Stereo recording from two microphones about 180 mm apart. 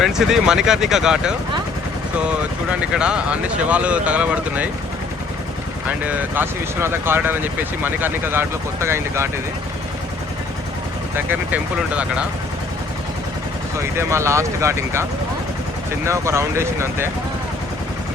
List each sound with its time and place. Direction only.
0.0 s speech: 5° right (ahead or behind)
2.9 s speech: 5° right (ahead or behind)
6.1 s speech: 10° right (ahead or behind)
11.3 s speech: 10° right (ahead or behind)
13.7 s speech: 15° right (ahead or behind)
16.0 s speech: 15° right (ahead or behind)